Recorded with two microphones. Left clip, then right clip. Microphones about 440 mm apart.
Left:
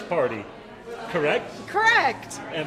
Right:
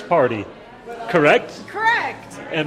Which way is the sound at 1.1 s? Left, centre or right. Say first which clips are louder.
Right 9 dB; right.